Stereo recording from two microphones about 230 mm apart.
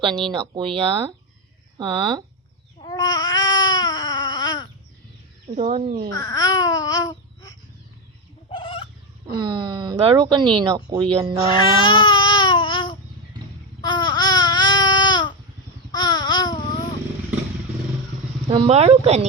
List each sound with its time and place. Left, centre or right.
0.3 s speech: right
2.7 s baby cry: centre
5.5 s speech: right
6.1 s babbling: centre
8.4 s fowl: left
9.4 s speech: centre
11.5 s babbling: left
18.4 s speech: right